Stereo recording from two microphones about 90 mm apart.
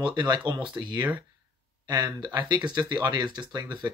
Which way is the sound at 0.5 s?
60° right (ahead or behind).